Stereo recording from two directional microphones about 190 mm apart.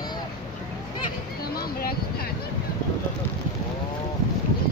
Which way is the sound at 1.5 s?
55° left (ahead or behind).